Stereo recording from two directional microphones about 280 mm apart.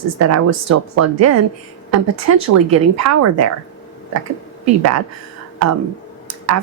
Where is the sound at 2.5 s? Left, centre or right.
Right.